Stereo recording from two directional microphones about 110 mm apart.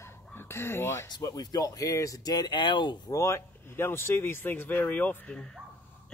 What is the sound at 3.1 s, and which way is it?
Speech, 25° left (ahead or behind).